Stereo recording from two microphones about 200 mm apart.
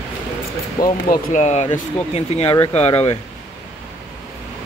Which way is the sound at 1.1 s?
40° left (ahead or behind).